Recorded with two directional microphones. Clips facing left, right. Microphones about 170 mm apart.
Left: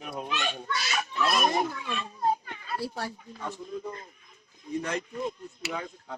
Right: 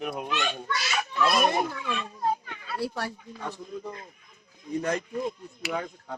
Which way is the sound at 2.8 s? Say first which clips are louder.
Right 4 dB; 65° right (ahead or behind).